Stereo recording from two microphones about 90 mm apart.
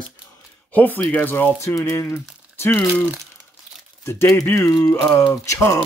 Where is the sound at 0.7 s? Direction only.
20° left (ahead or behind).